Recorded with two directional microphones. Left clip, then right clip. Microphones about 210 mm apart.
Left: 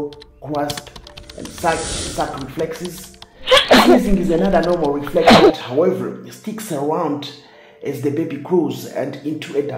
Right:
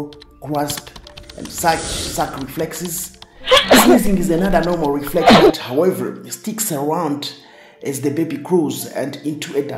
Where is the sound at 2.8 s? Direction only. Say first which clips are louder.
Right 2 dB; centre (ahead or behind).